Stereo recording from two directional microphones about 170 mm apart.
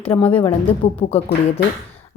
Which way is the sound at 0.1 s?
25° left (ahead or behind).